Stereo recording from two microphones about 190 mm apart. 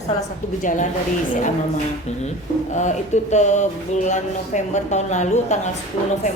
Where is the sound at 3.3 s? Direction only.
40° left (ahead or behind).